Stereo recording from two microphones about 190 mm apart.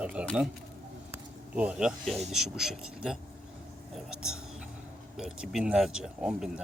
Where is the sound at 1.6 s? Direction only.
5° right (ahead or behind).